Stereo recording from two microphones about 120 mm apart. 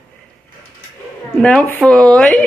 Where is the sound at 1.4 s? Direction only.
5° left (ahead or behind).